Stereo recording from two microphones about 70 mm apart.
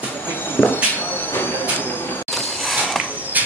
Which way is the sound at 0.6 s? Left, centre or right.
Centre.